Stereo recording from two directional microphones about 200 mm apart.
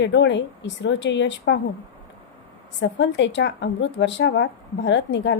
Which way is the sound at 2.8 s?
65° left (ahead or behind).